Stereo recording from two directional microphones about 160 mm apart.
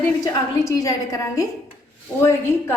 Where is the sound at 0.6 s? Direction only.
20° left (ahead or behind).